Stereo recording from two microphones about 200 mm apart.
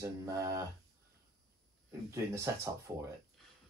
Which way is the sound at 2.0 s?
15° right (ahead or behind).